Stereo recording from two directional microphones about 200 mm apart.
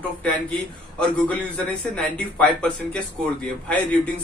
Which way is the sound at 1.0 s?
5° left (ahead or behind).